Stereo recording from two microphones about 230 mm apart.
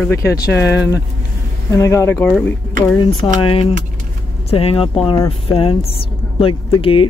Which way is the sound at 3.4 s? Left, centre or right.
Left.